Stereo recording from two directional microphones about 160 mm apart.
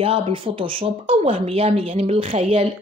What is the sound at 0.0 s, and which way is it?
Speech, 35° right (ahead or behind).